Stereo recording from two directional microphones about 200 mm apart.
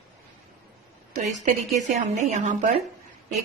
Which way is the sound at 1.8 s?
35° right (ahead or behind).